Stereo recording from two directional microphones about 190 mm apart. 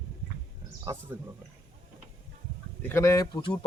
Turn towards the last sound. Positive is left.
turn(degrees=20)  # may be behind; listen again after turning